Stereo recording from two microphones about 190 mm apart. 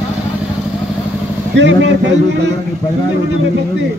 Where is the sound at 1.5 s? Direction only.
70° right (ahead or behind).